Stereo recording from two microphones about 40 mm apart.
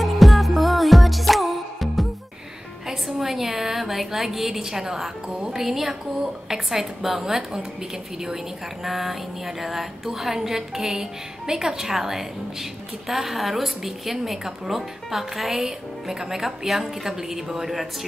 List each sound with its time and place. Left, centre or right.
0.0 s music: centre
2.9 s a sound: centre
5.3 s a woman's voice: centre
8.8 s a woman's voice: centre